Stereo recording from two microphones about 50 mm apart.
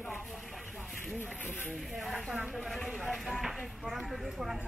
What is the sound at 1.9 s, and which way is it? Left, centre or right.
Speech, centre.